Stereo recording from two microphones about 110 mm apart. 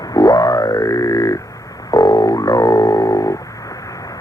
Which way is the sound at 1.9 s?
40° left (ahead or behind).